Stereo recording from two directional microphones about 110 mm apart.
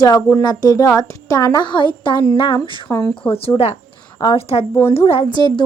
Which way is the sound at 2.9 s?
20° left (ahead or behind).